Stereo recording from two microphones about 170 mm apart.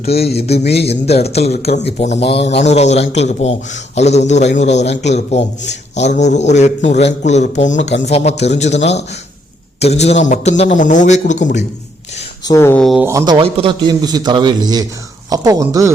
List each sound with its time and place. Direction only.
0.0 s a man's voice: 35° left (ahead or behind)
12.5 s speech: 15° left (ahead or behind)
12.8 s speech: centre (ahead or behind)
13.1 s a man's voice: 20° right (ahead or behind)